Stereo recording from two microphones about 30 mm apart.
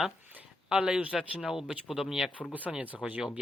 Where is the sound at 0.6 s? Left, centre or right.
Right.